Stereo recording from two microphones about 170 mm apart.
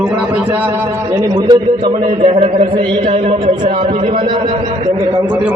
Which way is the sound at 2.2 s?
40° right (ahead or behind).